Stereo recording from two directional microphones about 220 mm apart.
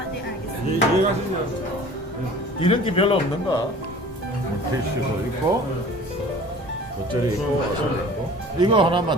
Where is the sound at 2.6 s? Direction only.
25° left (ahead or behind).